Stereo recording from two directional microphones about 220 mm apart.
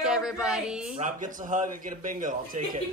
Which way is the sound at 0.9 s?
35° right (ahead or behind).